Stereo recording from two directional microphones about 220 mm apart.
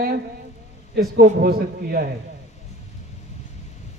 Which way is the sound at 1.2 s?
45° right (ahead or behind).